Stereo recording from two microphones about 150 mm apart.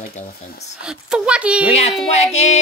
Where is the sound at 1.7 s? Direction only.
45° left (ahead or behind).